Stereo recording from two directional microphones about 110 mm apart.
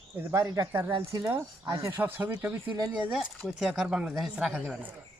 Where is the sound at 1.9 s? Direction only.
20° right (ahead or behind).